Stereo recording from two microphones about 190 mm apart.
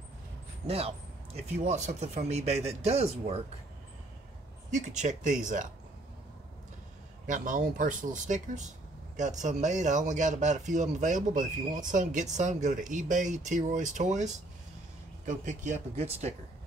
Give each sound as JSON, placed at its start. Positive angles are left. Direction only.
{"t": 0.7, "sound": "speech", "side_deg": -30}
{"t": 4.6, "sound": "speech", "side_deg": -40}
{"t": 7.2, "sound": "speech", "side_deg": -45}